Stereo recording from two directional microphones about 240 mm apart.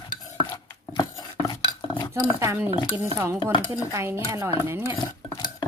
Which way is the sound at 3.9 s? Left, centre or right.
Centre.